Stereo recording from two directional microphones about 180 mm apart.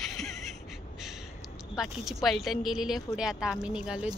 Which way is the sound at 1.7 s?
Centre (ahead or behind).